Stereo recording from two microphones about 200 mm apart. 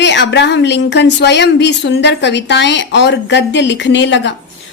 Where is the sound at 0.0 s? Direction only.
60° left (ahead or behind).